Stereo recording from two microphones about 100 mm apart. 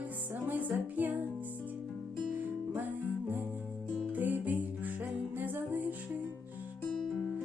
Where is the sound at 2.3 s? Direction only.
20° right (ahead or behind).